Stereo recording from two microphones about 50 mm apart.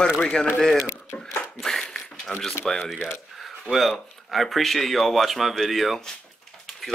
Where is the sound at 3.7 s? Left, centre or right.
Centre.